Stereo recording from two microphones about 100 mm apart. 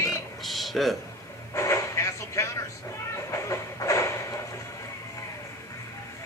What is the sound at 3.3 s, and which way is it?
Train, 35° left (ahead or behind).